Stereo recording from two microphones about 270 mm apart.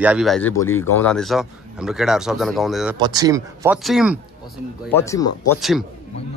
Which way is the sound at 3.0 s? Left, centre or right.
Centre.